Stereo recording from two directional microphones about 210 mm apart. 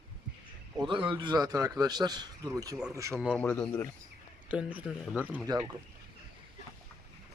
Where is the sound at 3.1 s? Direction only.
Centre (ahead or behind).